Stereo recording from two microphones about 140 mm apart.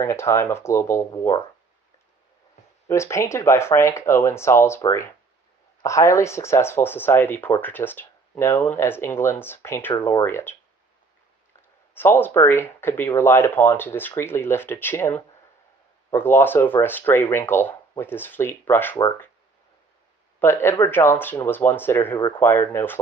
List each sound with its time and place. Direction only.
0.0 s speech: 20° left (ahead or behind)
2.9 s speech: 20° left (ahead or behind)
11.9 s speech: 15° left (ahead or behind)
20.3 s speech: 20° left (ahead or behind)